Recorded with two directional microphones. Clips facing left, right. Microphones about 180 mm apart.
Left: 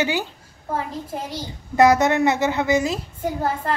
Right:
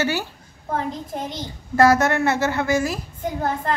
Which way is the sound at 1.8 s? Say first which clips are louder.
Left 1 dB; 20° left (ahead or behind).